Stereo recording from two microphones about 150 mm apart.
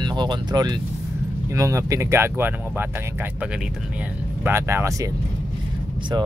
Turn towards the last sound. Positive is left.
turn(degrees=-30)  # may be behind; listen again after turning